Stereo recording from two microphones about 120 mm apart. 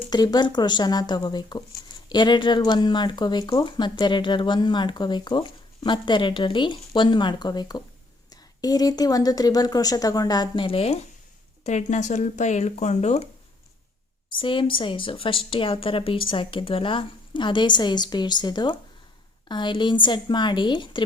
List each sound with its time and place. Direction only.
0.1 s speech: 35° left (ahead or behind); by 11.0 s 55° left (ahead or behind)
11.6 s speech: 85° left; by 13.2 s 70° left (ahead or behind)
14.3 s a woman's voice: 45° left (ahead or behind)